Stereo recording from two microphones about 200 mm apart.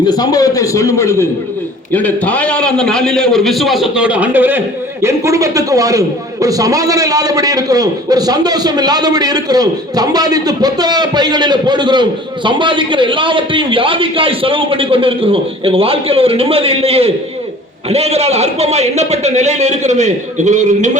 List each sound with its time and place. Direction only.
0.0 s a man's voice: 20° left (ahead or behind); by 21.0 s 35° right (ahead or behind)